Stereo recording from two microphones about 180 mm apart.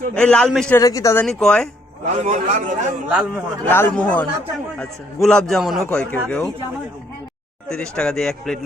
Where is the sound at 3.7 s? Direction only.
10° left (ahead or behind).